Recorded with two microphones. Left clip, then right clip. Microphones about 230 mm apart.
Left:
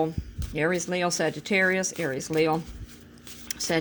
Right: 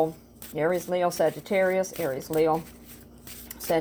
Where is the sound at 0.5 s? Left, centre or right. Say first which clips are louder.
Right 1 dB; left.